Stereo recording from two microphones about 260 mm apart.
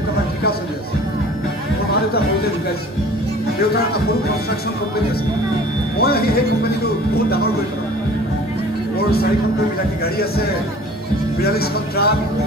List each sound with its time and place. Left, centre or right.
6.0 s speech: left
11.4 s speech: left